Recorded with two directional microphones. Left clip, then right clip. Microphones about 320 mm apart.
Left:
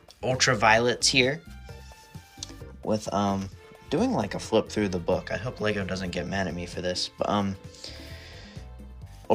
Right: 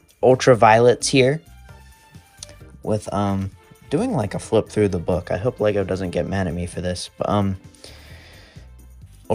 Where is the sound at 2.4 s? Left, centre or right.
Right.